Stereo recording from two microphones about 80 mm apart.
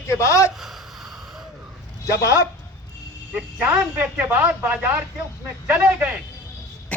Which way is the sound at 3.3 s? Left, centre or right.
Centre.